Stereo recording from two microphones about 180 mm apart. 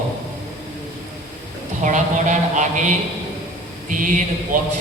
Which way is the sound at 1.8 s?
45° right (ahead or behind).